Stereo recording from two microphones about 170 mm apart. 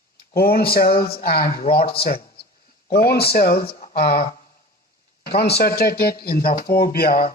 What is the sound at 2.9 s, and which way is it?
A man's voice, 65° left (ahead or behind).